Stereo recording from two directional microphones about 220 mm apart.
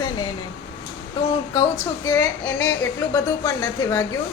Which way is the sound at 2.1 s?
10° left (ahead or behind).